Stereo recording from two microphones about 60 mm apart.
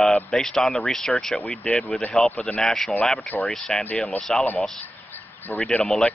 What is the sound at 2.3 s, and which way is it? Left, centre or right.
Speech, left.